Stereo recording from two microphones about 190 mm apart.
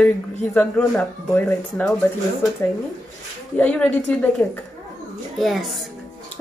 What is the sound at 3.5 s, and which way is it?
Speech, 5° left (ahead or behind).